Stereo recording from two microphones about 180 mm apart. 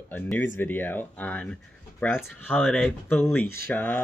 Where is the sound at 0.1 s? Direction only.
10° left (ahead or behind).